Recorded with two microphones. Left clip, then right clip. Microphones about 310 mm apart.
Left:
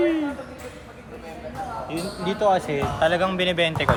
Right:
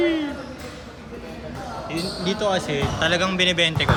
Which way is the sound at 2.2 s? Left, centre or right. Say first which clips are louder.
Left 3 dB; centre.